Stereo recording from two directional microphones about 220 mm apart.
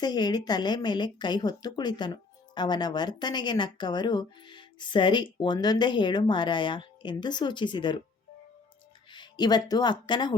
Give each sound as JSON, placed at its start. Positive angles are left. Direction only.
{"t": 0.0, "sound": "speech", "side_deg": 20}
{"t": 9.0, "sound": "speech", "side_deg": 20}